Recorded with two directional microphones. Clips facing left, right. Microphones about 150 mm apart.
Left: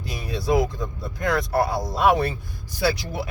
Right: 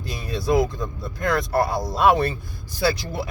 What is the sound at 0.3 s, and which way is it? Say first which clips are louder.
Speech: right 1 dB; 10° left (ahead or behind).